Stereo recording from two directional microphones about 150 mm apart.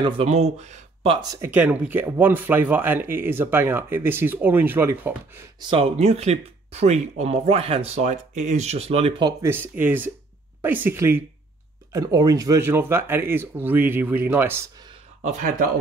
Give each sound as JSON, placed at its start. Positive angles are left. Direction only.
{"t": 0.2, "sound": "speech", "side_deg": -45}
{"t": 1.4, "sound": "speech", "side_deg": -10}
{"t": 5.6, "sound": "speech", "side_deg": -35}
{"t": 5.9, "sound": "speech", "side_deg": -45}
{"t": 9.4, "sound": "speech", "side_deg": -15}
{"t": 15.2, "sound": "speech", "side_deg": -55}